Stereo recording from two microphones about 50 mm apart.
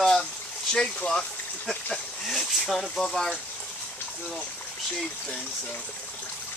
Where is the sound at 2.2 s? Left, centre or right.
Centre.